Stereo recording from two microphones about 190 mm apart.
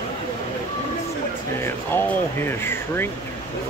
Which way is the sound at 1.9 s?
10° left (ahead or behind).